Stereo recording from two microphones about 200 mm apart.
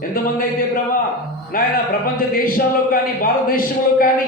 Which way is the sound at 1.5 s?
45° left (ahead or behind).